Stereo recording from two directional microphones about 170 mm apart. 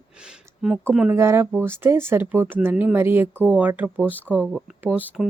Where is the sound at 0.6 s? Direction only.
Centre (ahead or behind).